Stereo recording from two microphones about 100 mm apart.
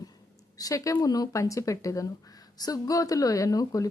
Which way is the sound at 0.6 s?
35° left (ahead or behind).